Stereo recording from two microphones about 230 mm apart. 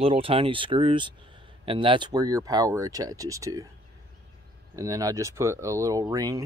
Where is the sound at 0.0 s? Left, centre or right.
Right.